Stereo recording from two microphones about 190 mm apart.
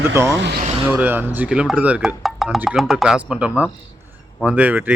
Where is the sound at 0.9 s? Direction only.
10° right (ahead or behind).